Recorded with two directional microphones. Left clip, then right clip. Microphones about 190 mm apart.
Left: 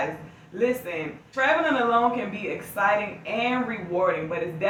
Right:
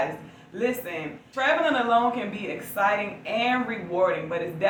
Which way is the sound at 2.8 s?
15° left (ahead or behind).